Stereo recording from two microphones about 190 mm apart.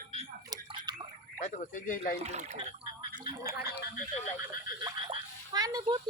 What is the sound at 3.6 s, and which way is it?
Speech, 55° left (ahead or behind).